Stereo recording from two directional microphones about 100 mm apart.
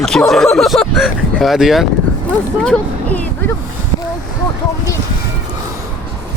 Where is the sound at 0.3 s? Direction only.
5° left (ahead or behind).